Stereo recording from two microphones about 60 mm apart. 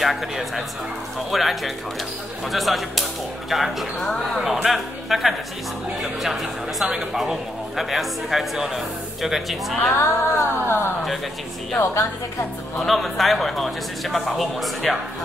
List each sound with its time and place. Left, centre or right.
0.0 s speech: centre
9.9 s a sound: left
12.7 s speech: centre